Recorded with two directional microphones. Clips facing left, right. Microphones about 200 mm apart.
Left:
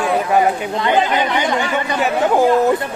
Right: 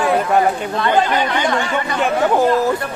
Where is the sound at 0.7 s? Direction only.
15° left (ahead or behind).